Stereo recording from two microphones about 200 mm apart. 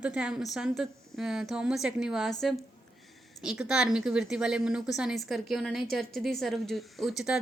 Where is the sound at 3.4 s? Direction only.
5° right (ahead or behind).